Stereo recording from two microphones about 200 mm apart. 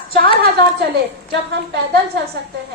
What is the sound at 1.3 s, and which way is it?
Speech, 60° right (ahead or behind).